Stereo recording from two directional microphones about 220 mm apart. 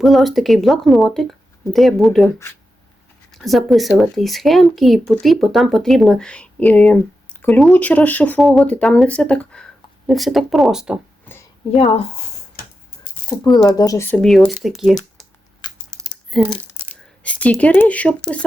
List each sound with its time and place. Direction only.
0.0 s speech: centre (ahead or behind)
3.3 s speech: centre (ahead or behind)
11.8 s speech: 25° left (ahead or behind)
13.1 s a sound: 40° left (ahead or behind)
13.6 s speech: 15° left (ahead or behind); by 14.9 s centre (ahead or behind)
16.0 s a sound: centre (ahead or behind)
17.2 s speech: 5° left (ahead or behind)